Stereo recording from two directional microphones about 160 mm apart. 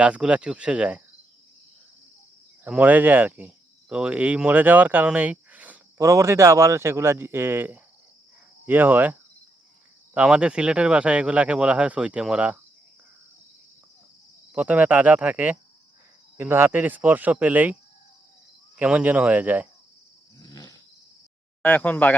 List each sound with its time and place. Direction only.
0.0 s speech: 5° right (ahead or behind)
2.6 s speech: 10° right (ahead or behind)
10.2 s speech: 5° right (ahead or behind)
14.5 s speech: 10° right (ahead or behind)
18.8 s speech: 10° right (ahead or behind)
20.4 s a sound: 25° left (ahead or behind)
21.6 s speech: 10° left (ahead or behind)